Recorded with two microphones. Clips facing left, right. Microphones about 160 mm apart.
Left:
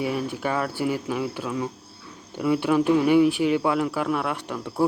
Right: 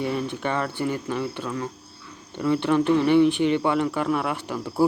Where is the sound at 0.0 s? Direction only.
5° left (ahead or behind).